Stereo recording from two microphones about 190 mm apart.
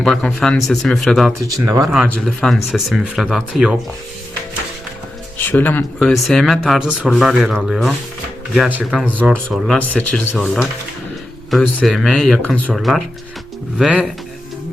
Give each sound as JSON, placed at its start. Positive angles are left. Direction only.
{"t": 0.0, "sound": "speech", "side_deg": 5}
{"t": 1.3, "sound": "speech", "side_deg": -15}
{"t": 2.0, "sound": "speech", "side_deg": 0}
{"t": 5.4, "sound": "speech", "side_deg": 10}
{"t": 9.7, "sound": "speech", "side_deg": 5}